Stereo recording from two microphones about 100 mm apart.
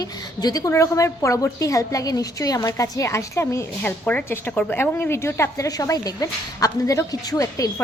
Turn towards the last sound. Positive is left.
turn(degrees=35)  # may be behind; listen again after turning